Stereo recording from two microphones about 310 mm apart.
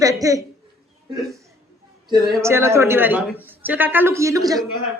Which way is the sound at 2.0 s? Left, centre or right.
Centre.